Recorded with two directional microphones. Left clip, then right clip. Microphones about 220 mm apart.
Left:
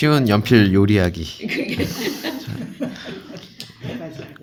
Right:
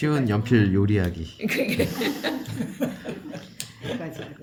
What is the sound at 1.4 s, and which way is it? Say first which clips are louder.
Speech: even; 50° right (ahead or behind).